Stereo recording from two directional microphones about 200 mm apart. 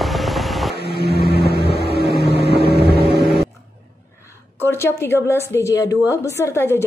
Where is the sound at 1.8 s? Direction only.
50° left (ahead or behind).